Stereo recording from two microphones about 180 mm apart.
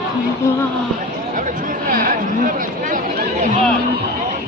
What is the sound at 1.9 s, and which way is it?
Speech, 50° right (ahead or behind).